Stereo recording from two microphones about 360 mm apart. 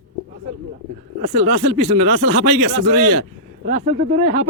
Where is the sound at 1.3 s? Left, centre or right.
Centre.